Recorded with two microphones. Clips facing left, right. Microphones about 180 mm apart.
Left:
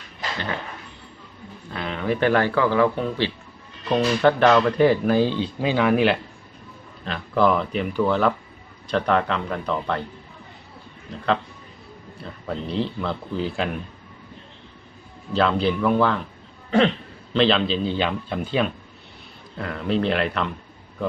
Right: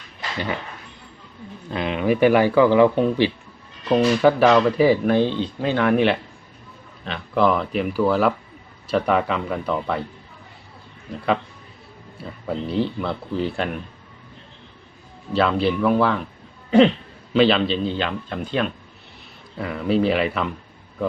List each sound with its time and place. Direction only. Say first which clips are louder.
1.7 s a man's voice: right 4 dB; 15° right (ahead or behind)
3.8 s speech: right 2 dB; 5° right (ahead or behind)
12.2 s speech: right 3 dB; 5° right (ahead or behind)
15.3 s speech: right 1 dB; 5° right (ahead or behind)
17.3 s speech: right 2 dB; 5° right (ahead or behind)
17.9 s speech: left 1 dB; 5° left (ahead or behind)